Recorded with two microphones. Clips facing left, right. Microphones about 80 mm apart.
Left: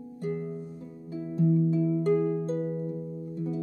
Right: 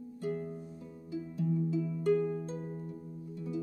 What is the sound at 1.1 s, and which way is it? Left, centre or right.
Harp, left.